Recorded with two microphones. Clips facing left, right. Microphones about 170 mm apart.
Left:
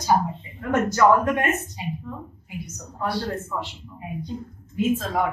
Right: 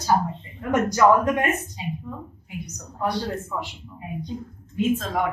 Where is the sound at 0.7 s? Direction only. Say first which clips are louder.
Even; 15° right (ahead or behind).